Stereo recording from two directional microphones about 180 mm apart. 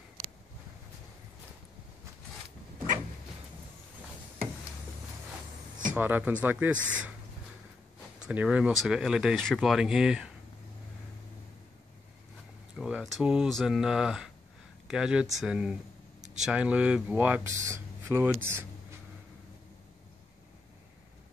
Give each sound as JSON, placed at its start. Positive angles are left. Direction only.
{"t": 5.9, "sound": "speech", "side_deg": -10}
{"t": 8.2, "sound": "speech", "side_deg": -5}
{"t": 12.7, "sound": "speech", "side_deg": -5}